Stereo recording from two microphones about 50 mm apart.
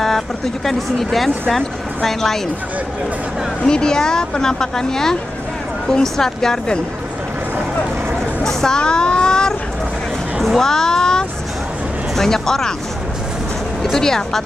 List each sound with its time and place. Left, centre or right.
0.7 s speech: centre
3.6 s speech: centre
8.5 s a sound: centre
10.4 s a child's voice: centre
13.9 s speech: centre